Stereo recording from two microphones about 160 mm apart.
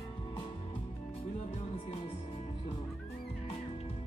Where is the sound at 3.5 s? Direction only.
40° left (ahead or behind).